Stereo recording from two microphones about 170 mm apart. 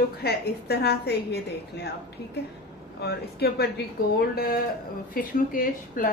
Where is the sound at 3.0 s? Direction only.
70° left (ahead or behind).